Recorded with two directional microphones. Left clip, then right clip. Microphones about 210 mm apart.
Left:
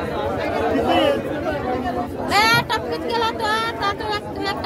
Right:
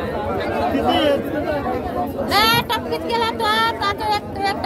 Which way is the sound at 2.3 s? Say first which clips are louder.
Even; 35° right (ahead or behind).